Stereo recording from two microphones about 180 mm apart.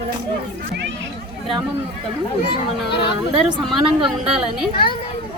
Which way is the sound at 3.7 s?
Centre (ahead or behind).